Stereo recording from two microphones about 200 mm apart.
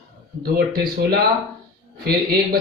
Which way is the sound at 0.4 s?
45° right (ahead or behind).